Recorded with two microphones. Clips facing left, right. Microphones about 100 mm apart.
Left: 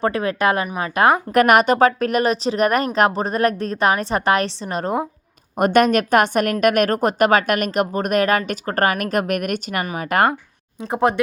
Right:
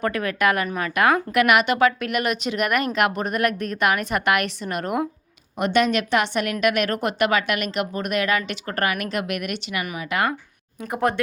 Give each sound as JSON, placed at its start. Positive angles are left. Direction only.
{"t": 0.0, "sound": "a woman's voice", "side_deg": 30}
{"t": 1.3, "sound": "speech", "side_deg": 40}
{"t": 5.5, "sound": "a woman's voice", "side_deg": 50}
{"t": 11.1, "sound": "a woman's voice", "side_deg": 20}